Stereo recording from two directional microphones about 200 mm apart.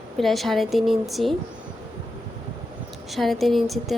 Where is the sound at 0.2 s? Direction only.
Centre (ahead or behind).